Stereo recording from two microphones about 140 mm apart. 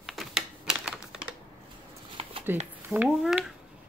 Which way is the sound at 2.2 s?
45° right (ahead or behind).